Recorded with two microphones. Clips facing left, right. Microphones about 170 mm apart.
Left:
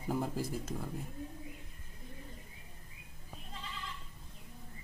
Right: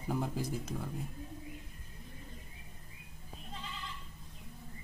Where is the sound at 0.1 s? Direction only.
Centre (ahead or behind).